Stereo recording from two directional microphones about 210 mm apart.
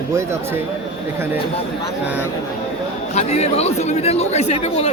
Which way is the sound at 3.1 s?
30° left (ahead or behind).